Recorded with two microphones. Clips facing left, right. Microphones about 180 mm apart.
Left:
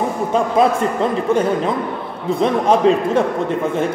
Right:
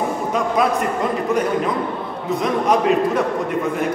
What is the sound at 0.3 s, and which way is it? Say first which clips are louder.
Speech: left 4 dB; 30° left (ahead or behind).